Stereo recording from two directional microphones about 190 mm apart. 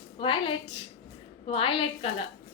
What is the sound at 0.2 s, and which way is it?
A woman's voice, 25° left (ahead or behind).